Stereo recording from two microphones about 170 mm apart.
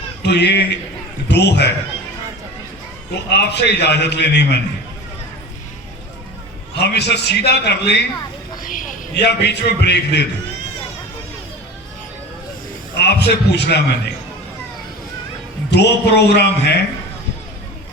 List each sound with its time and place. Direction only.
0.2 s a man's voice: 80° left
3.2 s a man's voice: 80° left
6.7 s a man's voice: 75° left (ahead or behind)
8.6 s a sound: 50° left (ahead or behind)
9.1 s a man's voice: 80° left
13.0 s a man's voice: 80° left
15.7 s a man's voice: 80° left